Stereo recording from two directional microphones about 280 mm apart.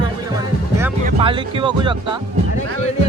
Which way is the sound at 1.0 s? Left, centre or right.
Centre.